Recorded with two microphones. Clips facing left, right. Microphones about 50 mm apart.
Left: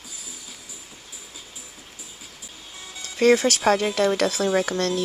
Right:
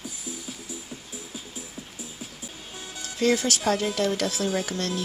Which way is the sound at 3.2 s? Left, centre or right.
Left.